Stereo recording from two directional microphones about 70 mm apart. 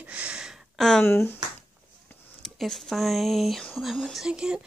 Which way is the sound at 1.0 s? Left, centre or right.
Left.